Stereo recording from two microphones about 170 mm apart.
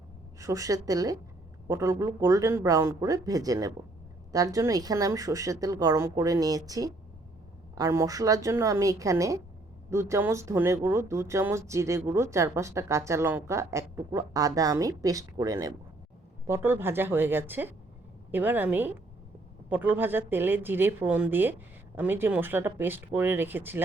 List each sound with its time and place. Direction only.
0.3 s speech: 20° right (ahead or behind)